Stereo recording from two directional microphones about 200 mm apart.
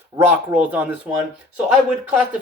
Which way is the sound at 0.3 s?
10° right (ahead or behind).